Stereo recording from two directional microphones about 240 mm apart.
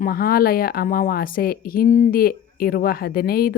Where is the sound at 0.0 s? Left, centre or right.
Left.